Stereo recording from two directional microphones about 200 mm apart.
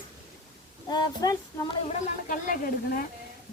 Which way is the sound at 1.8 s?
45° left (ahead or behind).